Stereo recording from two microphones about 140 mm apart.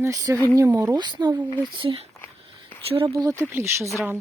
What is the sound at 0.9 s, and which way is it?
Speech, 30° right (ahead or behind).